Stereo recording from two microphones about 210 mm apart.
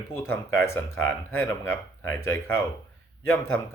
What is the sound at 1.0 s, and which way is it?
Speech, 70° left (ahead or behind).